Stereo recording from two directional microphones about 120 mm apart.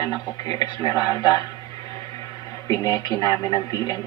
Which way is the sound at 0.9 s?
30° left (ahead or behind).